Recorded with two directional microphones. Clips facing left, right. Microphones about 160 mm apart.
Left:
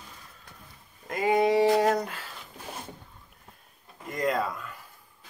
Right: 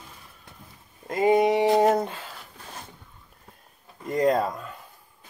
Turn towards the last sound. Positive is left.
turn(degrees=-35)  # may be behind; listen again after turning